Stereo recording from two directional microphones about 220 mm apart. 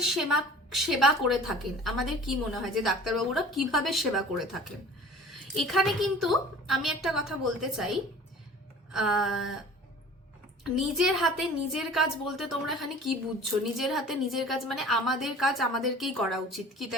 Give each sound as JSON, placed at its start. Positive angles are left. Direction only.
{"t": 0.0, "sound": "a woman's voice", "side_deg": 0}
{"t": 10.6, "sound": "a woman's voice", "side_deg": 0}